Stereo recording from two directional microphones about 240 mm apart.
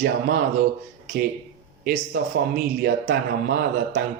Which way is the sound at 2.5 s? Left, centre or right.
Right.